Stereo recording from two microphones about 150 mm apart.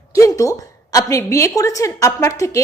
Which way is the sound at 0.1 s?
20° left (ahead or behind).